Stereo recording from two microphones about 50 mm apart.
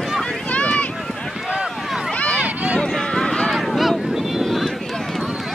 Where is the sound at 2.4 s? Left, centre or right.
Right.